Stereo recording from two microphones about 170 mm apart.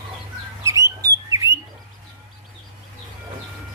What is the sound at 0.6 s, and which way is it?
Bird, 20° right (ahead or behind).